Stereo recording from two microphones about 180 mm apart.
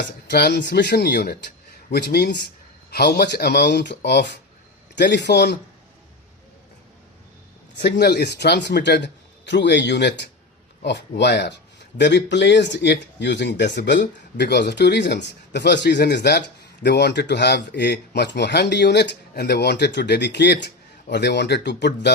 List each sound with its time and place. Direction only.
0.3 s speech: 65° left (ahead or behind)
7.8 s speech: 65° left (ahead or behind)